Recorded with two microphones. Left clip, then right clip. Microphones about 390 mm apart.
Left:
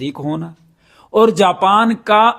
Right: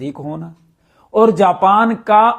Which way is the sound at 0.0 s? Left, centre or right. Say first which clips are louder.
Left 3 dB; left.